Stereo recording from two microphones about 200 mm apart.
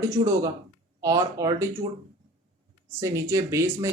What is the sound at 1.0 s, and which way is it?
Speech, 15° right (ahead or behind).